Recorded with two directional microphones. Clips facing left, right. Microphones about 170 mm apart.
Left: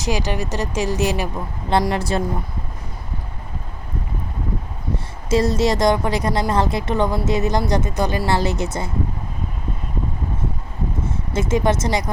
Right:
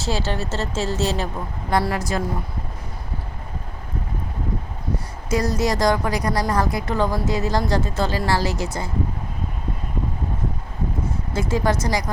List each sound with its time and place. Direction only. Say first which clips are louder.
0.0 s speech: left 2 dB; 15° left (ahead or behind)
2.0 s speech: left 3 dB; 30° left (ahead or behind)
5.3 s speech: left 4 dB; 25° left (ahead or behind)
11.3 s speech: left 3 dB; 20° left (ahead or behind)